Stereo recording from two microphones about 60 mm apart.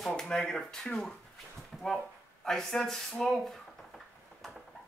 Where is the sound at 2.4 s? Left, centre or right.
Centre.